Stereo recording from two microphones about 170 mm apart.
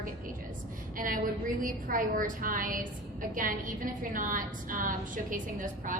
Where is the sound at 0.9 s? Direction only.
55° right (ahead or behind).